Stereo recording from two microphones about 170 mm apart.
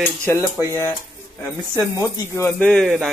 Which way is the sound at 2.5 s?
5° left (ahead or behind).